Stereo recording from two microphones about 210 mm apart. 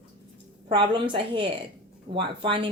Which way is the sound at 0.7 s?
20° right (ahead or behind).